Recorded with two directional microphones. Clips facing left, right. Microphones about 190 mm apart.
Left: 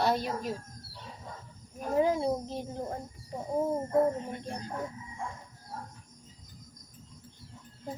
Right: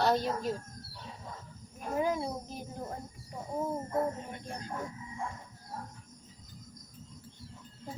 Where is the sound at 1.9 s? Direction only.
30° left (ahead or behind).